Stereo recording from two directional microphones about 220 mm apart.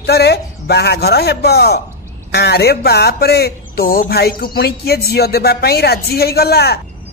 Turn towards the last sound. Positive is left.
turn(degrees=45)  # may be behind; listen again after turning